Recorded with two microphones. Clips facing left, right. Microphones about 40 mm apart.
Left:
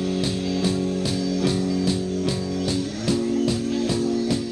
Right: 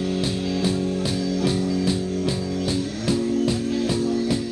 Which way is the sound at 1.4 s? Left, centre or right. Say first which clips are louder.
Even; centre.